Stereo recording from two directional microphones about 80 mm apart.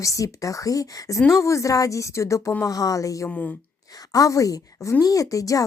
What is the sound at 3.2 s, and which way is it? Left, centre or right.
Speech, left.